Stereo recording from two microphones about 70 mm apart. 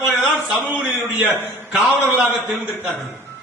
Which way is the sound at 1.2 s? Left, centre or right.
Centre.